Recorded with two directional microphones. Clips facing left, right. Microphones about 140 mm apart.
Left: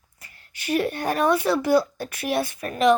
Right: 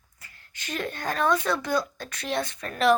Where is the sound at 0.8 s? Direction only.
15° left (ahead or behind).